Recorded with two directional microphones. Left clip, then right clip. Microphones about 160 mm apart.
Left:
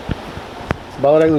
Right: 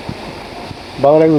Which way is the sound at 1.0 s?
Centre (ahead or behind).